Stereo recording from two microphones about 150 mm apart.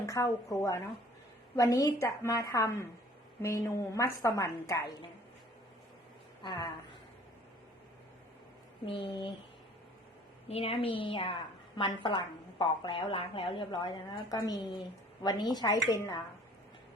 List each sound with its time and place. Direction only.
0.0 s a woman's voice: 20° left (ahead or behind)
8.9 s a woman's voice: 35° left (ahead or behind)
10.5 s a woman's voice: 40° left (ahead or behind)